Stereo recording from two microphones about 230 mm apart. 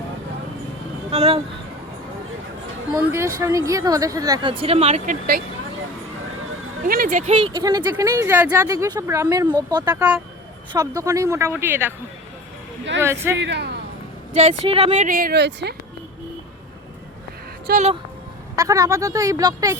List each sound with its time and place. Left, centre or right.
1.1 s speech: right
2.9 s speech: centre; by 5.4 s right
6.8 s speech: right; by 11.9 s centre
13.0 s speech: centre
13.4 s a sound: right
14.3 s speech: right
17.7 s speech: right
18.5 s speech: centre